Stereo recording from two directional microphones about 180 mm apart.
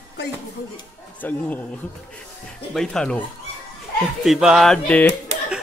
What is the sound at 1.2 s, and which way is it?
Speech, 10° left (ahead or behind).